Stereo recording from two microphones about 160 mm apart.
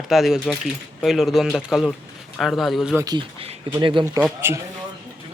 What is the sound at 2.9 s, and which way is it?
Speech, 25° right (ahead or behind).